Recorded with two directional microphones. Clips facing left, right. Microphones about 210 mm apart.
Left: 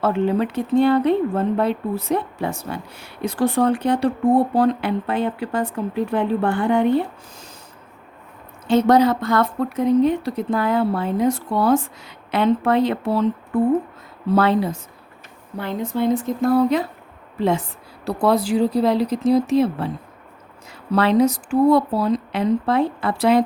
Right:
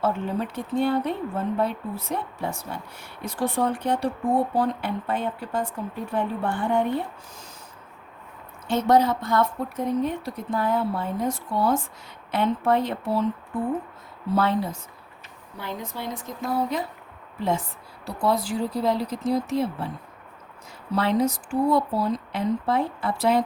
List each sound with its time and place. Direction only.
0.0 s speech: 85° left
8.6 s speech: 80° left
14.3 s speech: 80° left
15.5 s speech: 55° left (ahead or behind)
18.0 s speech: 75° left (ahead or behind)
20.9 s speech: 75° left (ahead or behind)